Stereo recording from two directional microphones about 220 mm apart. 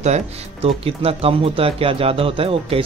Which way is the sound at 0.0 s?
30° right (ahead or behind).